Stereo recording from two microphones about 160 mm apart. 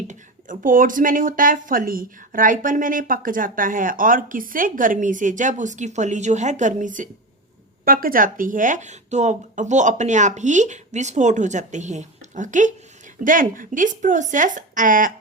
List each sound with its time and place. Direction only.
0.1 s speech: 55° right (ahead or behind)